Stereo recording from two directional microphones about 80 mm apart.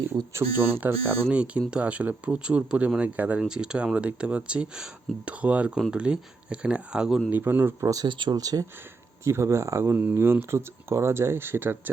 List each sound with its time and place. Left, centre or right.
0.3 s speech: right; by 7.2 s centre
7.3 s speech: right
8.0 s speech: right
8.4 s speech: right
9.2 s speech: right